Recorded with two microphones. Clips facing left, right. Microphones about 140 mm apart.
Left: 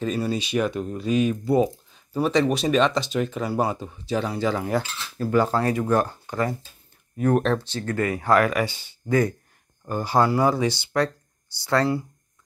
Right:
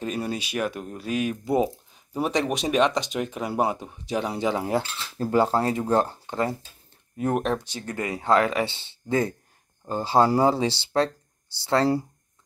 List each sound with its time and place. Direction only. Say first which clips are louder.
0.0 s speech: left 4 dB; 10° right (ahead or behind)
1.4 s speech: left 3 dB; 20° right (ahead or behind)
7.4 s speech: left 3 dB; 15° right (ahead or behind); by 12.1 s 35° right (ahead or behind)